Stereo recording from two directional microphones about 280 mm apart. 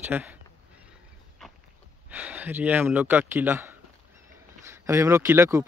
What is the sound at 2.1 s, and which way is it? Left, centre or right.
A man's voice, centre.